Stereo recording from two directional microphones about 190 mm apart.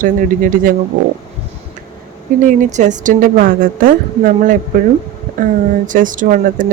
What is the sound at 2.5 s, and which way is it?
Speech, 40° right (ahead or behind).